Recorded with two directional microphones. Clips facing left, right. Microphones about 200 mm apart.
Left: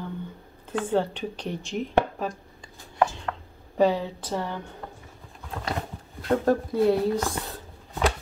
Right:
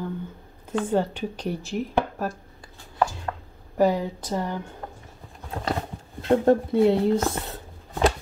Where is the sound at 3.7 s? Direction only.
10° right (ahead or behind).